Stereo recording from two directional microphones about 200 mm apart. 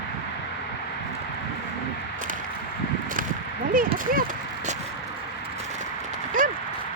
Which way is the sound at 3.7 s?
45° right (ahead or behind).